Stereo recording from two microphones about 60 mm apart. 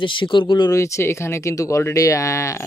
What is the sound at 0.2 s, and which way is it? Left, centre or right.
Speech, left.